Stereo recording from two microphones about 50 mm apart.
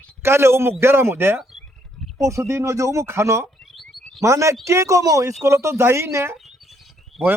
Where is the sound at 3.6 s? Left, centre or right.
Centre.